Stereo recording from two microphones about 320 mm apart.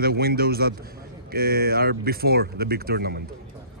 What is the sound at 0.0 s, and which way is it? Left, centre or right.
Speech, right.